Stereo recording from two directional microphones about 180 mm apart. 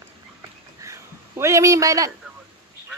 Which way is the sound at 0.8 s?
15° right (ahead or behind).